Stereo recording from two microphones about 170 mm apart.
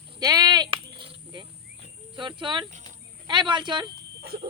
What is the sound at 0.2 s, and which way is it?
Sheep, 20° right (ahead or behind).